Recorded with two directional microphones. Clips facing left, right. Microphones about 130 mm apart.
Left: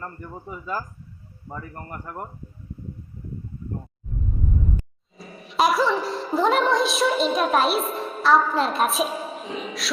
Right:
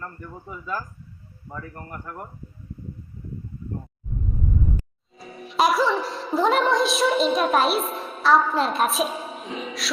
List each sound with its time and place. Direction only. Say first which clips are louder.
0.0 s speech: left 1 dB; 20° left (ahead or behind)
1.5 s speech: left 1 dB; 20° left (ahead or behind)
1.8 s speech: left 1 dB; 5° left (ahead or behind)
5.1 s music: even; centre (ahead or behind)